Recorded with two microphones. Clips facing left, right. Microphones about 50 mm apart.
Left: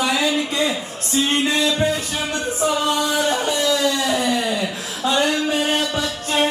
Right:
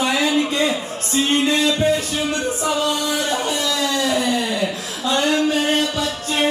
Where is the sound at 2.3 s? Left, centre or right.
Right.